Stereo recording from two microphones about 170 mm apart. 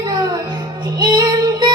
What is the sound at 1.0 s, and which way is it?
Music, 25° right (ahead or behind).